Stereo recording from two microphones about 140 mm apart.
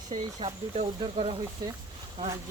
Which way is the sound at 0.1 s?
45° right (ahead or behind).